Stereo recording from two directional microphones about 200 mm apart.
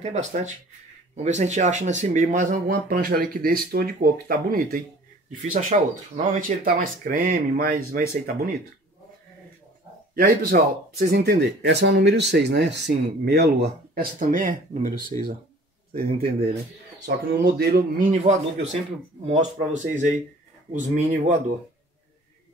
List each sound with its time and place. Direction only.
0.0 s speech: 35° right (ahead or behind)
10.1 s speech: 50° right (ahead or behind)
14.3 s speech: 40° right (ahead or behind)
17.0 s speech: 55° right (ahead or behind); by 21.4 s 35° right (ahead or behind)